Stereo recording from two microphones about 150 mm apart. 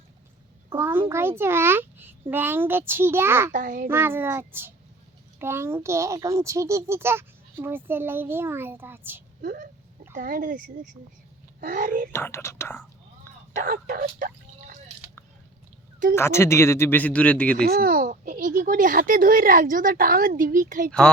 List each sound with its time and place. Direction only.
0.7 s a child's voice: 15° right (ahead or behind)
3.5 s speech: 60° right (ahead or behind)
3.8 s a child's voice: 15° right (ahead or behind)
9.4 s speech: 65° right (ahead or behind)
11.6 s speech: 65° right (ahead or behind)
12.1 s speech: 15° left (ahead or behind)
13.6 s speech: 70° right (ahead or behind)
16.1 s speech: 15° left (ahead or behind)
17.7 s speech: 75° right (ahead or behind)